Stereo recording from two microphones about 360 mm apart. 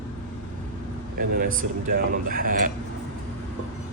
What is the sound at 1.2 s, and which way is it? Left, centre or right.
Speech, right.